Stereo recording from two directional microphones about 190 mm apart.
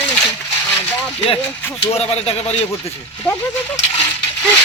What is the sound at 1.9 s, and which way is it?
Speech, 35° left (ahead or behind).